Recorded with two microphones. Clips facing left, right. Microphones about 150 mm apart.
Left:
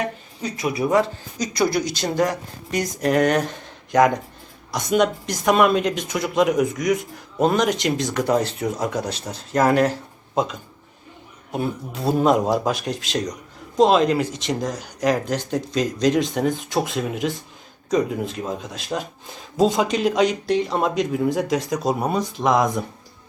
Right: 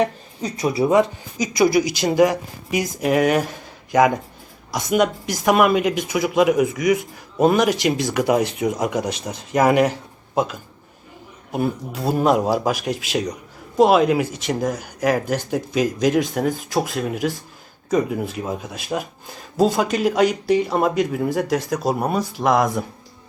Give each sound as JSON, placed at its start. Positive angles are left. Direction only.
{"t": 0.6, "sound": "speech", "side_deg": -30}
{"t": 0.9, "sound": "speech", "side_deg": -20}
{"t": 1.4, "sound": "speech", "side_deg": -10}